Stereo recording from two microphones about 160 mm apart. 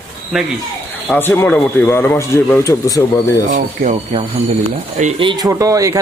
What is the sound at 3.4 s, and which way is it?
Speech, 55° right (ahead or behind).